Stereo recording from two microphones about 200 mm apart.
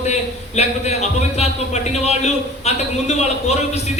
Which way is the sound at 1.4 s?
35° left (ahead or behind).